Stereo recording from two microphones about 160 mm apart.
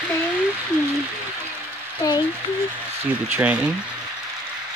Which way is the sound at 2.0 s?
25° left (ahead or behind).